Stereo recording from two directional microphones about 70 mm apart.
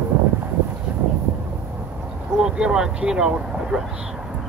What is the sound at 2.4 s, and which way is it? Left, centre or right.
Speech, centre.